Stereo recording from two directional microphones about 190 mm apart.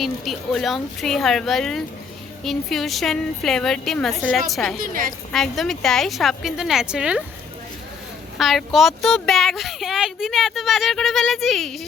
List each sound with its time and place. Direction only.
0.0 s speech: centre (ahead or behind)
4.8 s a woman's voice: 45° right (ahead or behind)
5.3 s speech: centre (ahead or behind)
8.4 s speech: centre (ahead or behind)